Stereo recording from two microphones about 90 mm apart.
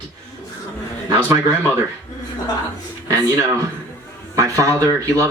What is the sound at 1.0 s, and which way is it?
Speech, 40° right (ahead or behind).